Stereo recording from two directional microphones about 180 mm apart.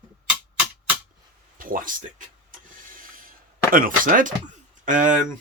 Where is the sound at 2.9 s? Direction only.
50° right (ahead or behind).